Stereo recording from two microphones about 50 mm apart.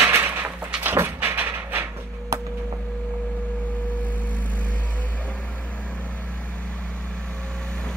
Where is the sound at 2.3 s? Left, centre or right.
Right.